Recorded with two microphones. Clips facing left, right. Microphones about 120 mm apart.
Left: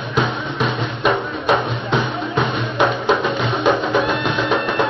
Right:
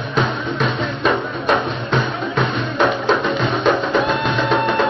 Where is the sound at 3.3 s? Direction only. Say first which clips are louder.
Even; 5° left (ahead or behind).